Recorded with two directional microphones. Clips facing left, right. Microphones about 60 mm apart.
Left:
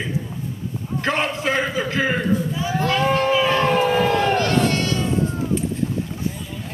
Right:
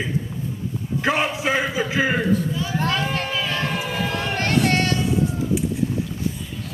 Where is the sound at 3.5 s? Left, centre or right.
Left.